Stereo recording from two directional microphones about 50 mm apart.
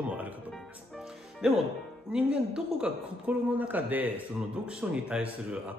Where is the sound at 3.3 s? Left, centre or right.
Right.